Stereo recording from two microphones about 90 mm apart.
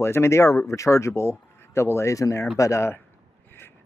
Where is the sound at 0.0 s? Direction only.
30° left (ahead or behind).